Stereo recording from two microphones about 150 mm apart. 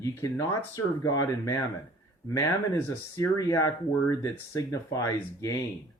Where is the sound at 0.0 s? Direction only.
20° left (ahead or behind).